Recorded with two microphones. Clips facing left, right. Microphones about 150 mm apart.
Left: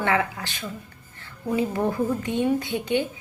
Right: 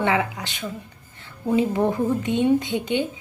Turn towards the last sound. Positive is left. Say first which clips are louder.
# right 2 dB
turn(degrees=-20)  # may be behind; listen again after turning